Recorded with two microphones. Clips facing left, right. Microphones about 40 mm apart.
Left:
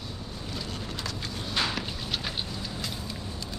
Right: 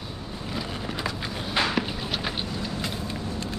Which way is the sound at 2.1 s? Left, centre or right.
Centre.